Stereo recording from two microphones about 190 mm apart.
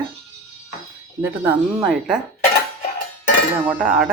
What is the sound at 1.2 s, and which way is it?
Speech, 10° right (ahead or behind).